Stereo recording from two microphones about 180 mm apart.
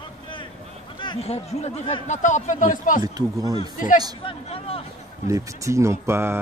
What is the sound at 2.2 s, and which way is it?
Speech, 45° left (ahead or behind).